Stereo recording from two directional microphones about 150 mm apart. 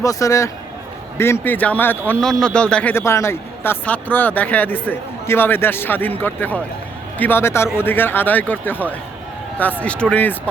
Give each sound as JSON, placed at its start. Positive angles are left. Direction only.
{"t": 0.0, "sound": "speech", "side_deg": 20}